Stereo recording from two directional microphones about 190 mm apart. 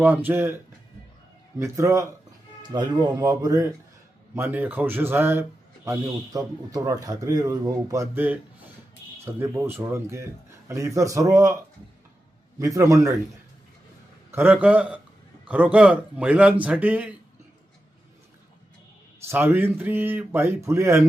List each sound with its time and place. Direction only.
0.0 s a man's voice: 10° right (ahead or behind)
1.5 s a man's voice: 15° right (ahead or behind)
12.5 s a man's voice: 15° right (ahead or behind)
14.3 s a man's voice: 10° right (ahead or behind)
19.3 s a man's voice: 10° right (ahead or behind)